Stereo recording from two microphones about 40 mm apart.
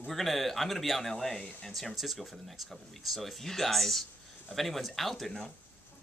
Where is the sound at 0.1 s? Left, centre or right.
Centre.